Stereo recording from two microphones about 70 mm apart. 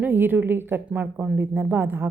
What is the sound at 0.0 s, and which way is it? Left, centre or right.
A woman's voice, right.